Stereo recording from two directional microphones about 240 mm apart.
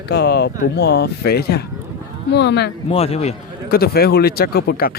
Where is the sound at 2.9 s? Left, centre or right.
Left.